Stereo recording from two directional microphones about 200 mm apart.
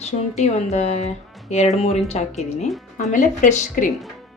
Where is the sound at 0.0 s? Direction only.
35° left (ahead or behind).